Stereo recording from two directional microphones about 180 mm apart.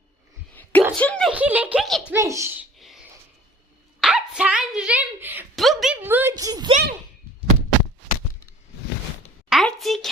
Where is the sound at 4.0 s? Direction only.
5° right (ahead or behind).